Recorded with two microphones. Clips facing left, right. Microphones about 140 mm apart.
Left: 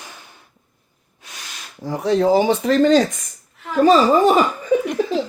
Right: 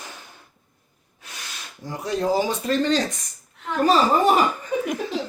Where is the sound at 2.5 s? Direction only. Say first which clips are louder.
Left 7 dB; 90° left.